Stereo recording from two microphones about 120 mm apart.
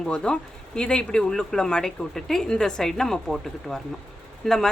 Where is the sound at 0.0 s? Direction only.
5° left (ahead or behind).